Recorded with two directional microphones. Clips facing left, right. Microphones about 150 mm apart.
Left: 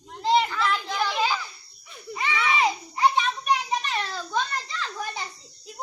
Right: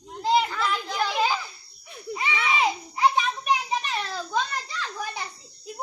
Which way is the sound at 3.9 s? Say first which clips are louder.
Even; 5° right (ahead or behind).